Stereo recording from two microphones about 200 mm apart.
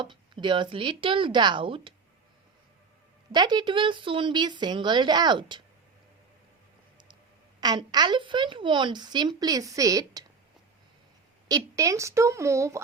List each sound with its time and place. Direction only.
0.0 s speech: 25° right (ahead or behind)
3.3 s speech: 20° right (ahead or behind)
7.6 s speech: 20° right (ahead or behind)
11.4 s a woman's voice: 15° right (ahead or behind)